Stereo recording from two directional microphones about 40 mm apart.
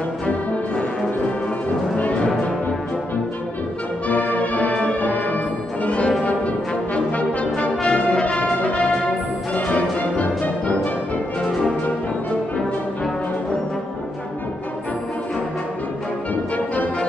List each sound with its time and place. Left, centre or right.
2.0 s music: left
4.1 s music: left
5.9 s brass instrument: left
8.5 s music: left
16.5 s music: left